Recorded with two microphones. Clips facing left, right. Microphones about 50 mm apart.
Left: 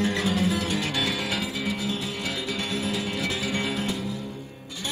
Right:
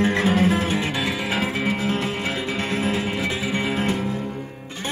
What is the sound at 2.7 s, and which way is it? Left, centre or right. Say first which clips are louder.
Music: right 6 dB; right.